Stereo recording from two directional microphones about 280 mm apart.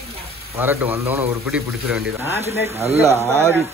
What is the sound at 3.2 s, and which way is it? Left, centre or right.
Speech, centre.